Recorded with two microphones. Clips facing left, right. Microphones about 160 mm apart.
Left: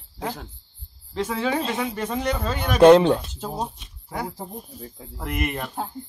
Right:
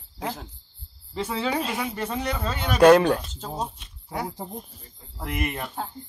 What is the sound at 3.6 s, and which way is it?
Speech, centre (ahead or behind).